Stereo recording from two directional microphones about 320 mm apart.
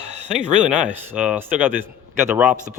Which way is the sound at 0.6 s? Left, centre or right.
Centre.